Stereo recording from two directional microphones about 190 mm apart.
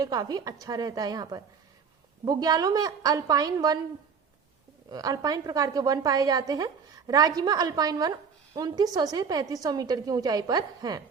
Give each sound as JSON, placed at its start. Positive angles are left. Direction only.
{"t": 0.0, "sound": "a woman's voice", "side_deg": -20}
{"t": 4.9, "sound": "a woman's voice", "side_deg": -20}